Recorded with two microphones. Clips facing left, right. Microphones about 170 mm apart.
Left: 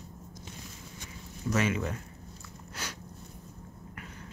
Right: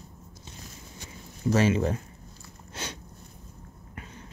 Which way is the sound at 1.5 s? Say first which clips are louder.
Right 6 dB; 30° right (ahead or behind).